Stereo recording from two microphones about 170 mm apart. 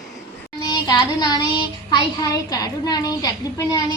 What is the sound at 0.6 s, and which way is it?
Child singing, 25° left (ahead or behind).